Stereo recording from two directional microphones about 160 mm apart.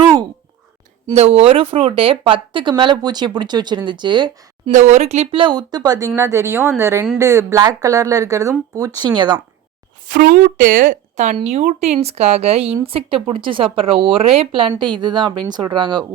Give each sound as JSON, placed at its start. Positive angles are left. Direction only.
{"t": 0.0, "sound": "a sound", "side_deg": -25}
{"t": 1.1, "sound": "speech", "side_deg": -40}
{"t": 4.7, "sound": "speech", "side_deg": -45}
{"t": 10.1, "sound": "speech", "side_deg": -60}